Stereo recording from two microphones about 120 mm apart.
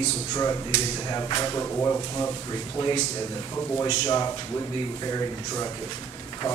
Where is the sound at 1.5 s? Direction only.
20° left (ahead or behind).